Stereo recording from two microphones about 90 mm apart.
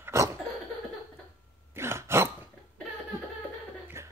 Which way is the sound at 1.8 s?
30° right (ahead or behind).